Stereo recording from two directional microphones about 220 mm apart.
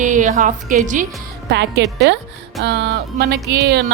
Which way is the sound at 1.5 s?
50° right (ahead or behind).